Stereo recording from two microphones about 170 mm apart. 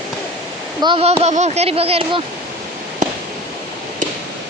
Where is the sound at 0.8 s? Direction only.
30° right (ahead or behind).